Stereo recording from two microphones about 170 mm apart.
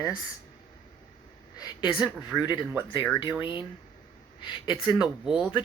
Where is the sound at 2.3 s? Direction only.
Centre (ahead or behind).